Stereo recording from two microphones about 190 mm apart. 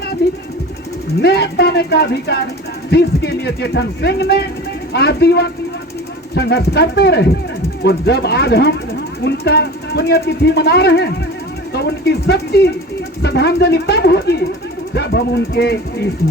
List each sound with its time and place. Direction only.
0.2 s speech: 60° left (ahead or behind)